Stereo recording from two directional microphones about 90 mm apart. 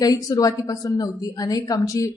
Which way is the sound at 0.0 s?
40° left (ahead or behind).